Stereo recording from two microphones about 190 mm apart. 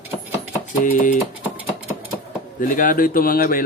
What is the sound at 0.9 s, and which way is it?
Speech, 45° left (ahead or behind).